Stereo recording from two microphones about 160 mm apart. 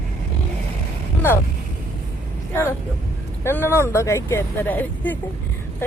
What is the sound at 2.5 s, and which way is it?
Speech, 15° left (ahead or behind).